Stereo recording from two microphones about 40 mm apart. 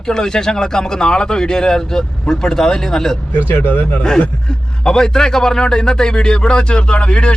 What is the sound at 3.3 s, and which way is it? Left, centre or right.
Speech, left.